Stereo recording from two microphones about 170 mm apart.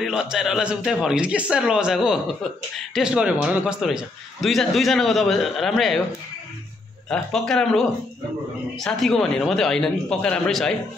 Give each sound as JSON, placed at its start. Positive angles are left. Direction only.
{"t": 0.0, "sound": "a man's voice", "side_deg": -5}
{"t": 7.1, "sound": "a man's voice", "side_deg": 5}